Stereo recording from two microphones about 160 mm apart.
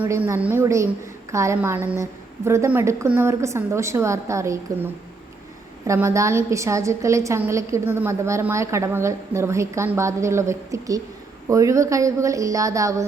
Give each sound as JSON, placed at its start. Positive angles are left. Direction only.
{"t": 0.0, "sound": "a woman's voice", "side_deg": -15}
{"t": 5.8, "sound": "a woman's voice", "side_deg": -20}